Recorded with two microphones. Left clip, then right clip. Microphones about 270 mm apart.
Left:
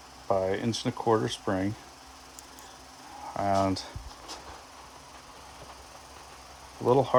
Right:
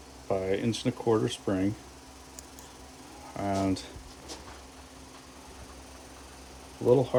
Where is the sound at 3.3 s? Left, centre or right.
Left.